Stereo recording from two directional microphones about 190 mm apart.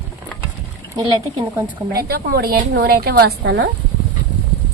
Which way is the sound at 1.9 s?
55° right (ahead or behind).